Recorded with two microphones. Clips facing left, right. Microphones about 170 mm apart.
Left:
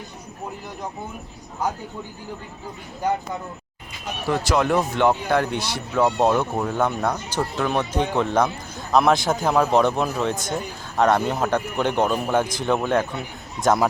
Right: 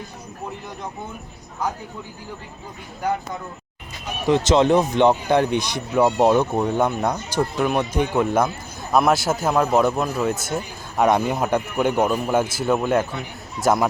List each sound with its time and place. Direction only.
4.3 s a man's voice: 20° right (ahead or behind); by 13.8 s 5° right (ahead or behind)